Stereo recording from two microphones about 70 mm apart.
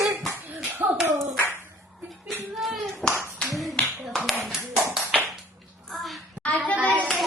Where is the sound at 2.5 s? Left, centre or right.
Centre.